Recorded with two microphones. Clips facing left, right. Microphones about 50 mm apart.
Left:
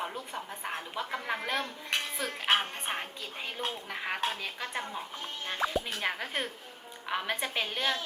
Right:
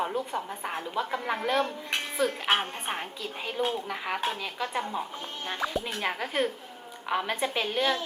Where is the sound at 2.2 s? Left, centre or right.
Right.